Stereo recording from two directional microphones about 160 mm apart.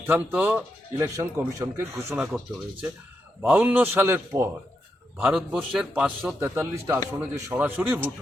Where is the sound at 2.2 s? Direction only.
5° right (ahead or behind).